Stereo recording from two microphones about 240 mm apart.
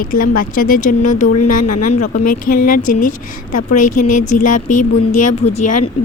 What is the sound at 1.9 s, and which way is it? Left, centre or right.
Speech, left.